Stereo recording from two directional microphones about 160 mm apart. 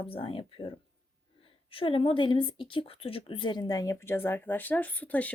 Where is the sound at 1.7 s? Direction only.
35° left (ahead or behind); by 5.3 s 10° left (ahead or behind).